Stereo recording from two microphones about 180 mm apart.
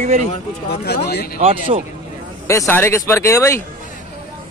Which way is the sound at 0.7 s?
60° left (ahead or behind).